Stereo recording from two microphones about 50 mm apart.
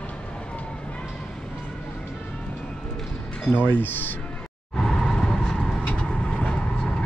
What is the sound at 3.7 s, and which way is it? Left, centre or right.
Speech, left.